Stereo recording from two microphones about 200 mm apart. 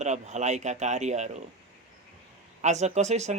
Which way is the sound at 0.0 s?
35° right (ahead or behind).